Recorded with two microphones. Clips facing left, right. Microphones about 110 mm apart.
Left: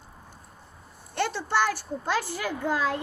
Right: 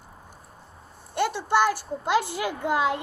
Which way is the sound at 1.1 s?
15° right (ahead or behind).